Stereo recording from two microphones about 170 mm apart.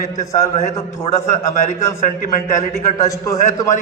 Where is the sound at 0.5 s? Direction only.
40° left (ahead or behind).